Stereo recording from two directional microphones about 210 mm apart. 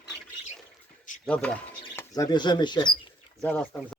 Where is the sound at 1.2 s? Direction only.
5° left (ahead or behind).